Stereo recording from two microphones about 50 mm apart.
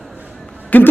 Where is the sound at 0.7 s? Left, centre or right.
Left.